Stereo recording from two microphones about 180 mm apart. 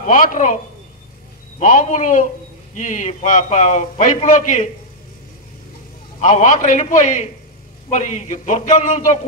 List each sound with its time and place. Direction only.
0.0 s a man's voice: 45° left (ahead or behind)
1.6 s a man's voice: 45° left (ahead or behind)
6.2 s a man's voice: 45° left (ahead or behind)